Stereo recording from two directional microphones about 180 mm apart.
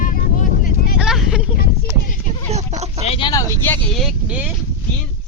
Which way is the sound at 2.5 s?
40° right (ahead or behind).